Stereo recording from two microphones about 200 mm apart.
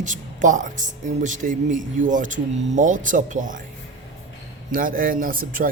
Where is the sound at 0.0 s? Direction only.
40° right (ahead or behind).